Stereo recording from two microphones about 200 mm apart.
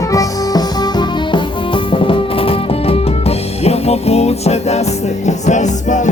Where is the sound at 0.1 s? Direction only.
20° left (ahead or behind).